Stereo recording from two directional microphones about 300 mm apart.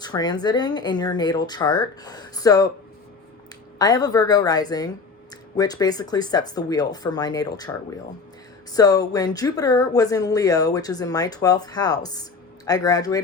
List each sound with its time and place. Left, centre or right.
0.0 s speech: centre
3.8 s speech: centre